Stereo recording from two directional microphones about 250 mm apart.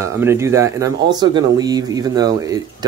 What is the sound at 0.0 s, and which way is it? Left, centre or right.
Speech, centre.